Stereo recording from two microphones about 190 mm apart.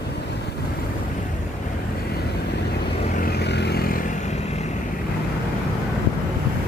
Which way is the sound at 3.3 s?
60° left (ahead or behind).